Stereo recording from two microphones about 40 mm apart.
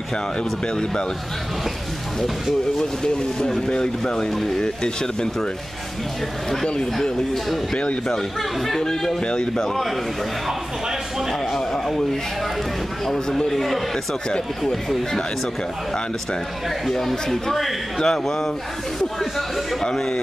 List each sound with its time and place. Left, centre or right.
2.8 s a man's voice: centre
6.5 s a man's voice: centre
7.7 s speech: left
8.1 s a man's voice: centre
9.2 s speech: left
9.6 s a man's voice: centre
11.5 s a man's voice: centre
16.9 s a man's voice: centre